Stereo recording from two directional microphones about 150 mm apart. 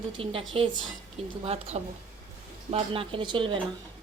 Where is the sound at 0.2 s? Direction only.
40° right (ahead or behind).